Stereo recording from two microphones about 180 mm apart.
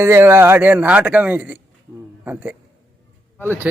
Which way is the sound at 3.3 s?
10° left (ahead or behind).